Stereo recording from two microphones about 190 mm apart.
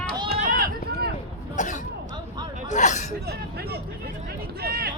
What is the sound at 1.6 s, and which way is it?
Speech, 40° left (ahead or behind).